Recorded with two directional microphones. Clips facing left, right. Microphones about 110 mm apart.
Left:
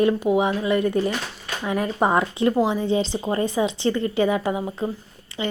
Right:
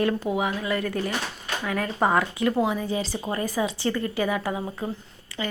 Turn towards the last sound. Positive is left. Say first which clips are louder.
# left 4 dB
turn(degrees=20)  # may be behind; listen again after turning